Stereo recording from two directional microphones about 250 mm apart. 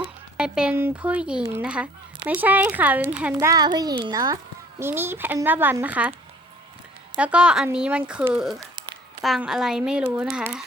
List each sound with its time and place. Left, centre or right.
0.3 s a child's voice: centre
7.2 s speech: centre